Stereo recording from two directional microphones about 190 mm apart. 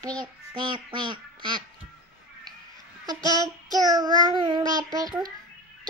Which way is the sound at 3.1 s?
20° right (ahead or behind).